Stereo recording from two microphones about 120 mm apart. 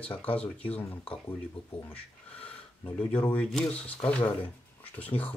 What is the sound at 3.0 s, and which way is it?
Speech, 10° left (ahead or behind).